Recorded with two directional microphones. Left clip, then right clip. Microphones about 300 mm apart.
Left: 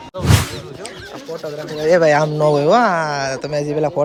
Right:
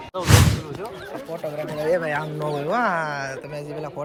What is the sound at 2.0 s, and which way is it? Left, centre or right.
Speech, centre.